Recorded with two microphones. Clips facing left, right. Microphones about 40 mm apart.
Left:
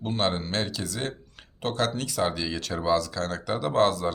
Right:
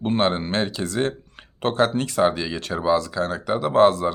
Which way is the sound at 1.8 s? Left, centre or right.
Right.